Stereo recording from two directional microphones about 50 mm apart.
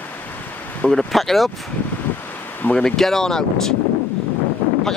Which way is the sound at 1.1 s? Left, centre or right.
Centre.